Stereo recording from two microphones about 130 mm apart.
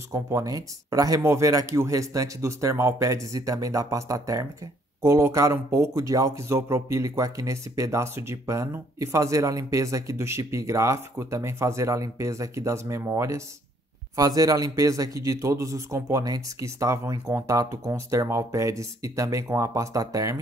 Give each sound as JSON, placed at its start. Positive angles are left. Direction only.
{"t": 0.1, "sound": "speech", "side_deg": -25}